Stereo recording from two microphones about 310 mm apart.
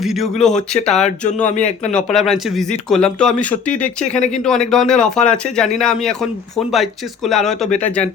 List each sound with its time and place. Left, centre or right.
0.0 s speech: centre
7.3 s speech: centre